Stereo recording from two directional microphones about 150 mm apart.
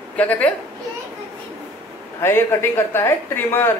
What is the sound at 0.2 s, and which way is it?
Speech, 10° left (ahead or behind).